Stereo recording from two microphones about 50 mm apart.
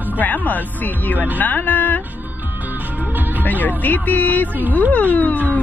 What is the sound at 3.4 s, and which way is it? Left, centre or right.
Speech, left.